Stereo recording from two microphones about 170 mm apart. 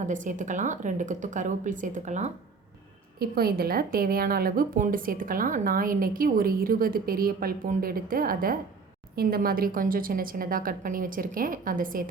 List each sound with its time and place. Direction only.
0.0 s speech: 45° right (ahead or behind)
3.2 s speech: 65° right (ahead or behind)